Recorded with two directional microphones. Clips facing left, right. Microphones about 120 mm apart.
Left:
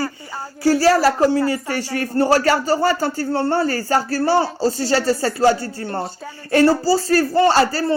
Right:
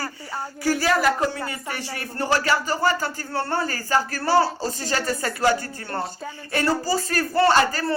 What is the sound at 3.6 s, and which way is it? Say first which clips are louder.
Speech: left 5 dB; 40° left (ahead or behind).